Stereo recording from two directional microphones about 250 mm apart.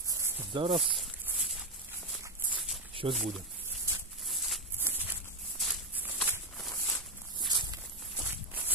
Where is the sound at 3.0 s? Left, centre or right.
Right.